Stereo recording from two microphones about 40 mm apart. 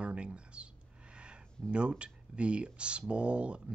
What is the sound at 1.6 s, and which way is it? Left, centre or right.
Speech, right.